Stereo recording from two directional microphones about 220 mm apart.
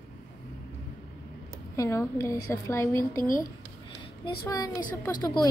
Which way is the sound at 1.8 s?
15° left (ahead or behind).